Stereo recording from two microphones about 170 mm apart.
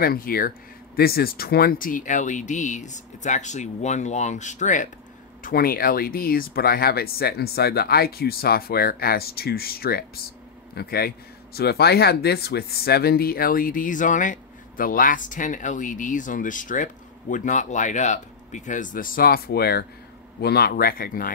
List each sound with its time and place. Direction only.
0.0 s a man's voice: 60° left (ahead or behind); by 4.8 s 45° left (ahead or behind)
5.4 s a man's voice: 60° left (ahead or behind)